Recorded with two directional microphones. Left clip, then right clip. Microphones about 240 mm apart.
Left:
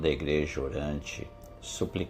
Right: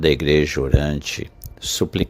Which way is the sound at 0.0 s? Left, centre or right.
Right.